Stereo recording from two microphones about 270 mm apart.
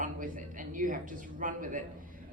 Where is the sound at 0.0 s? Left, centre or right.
Right.